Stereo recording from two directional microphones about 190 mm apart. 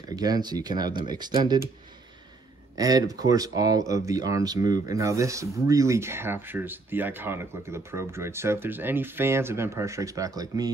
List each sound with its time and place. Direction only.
0.1 s speech: 20° right (ahead or behind)
2.7 s speech: 20° right (ahead or behind)